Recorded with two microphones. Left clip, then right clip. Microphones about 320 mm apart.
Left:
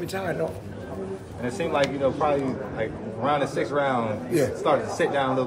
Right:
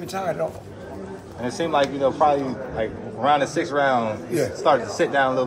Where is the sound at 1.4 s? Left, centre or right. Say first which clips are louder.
Right 3 dB; right.